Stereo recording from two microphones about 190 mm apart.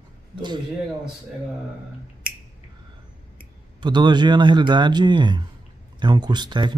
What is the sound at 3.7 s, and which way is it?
Speech, 25° right (ahead or behind).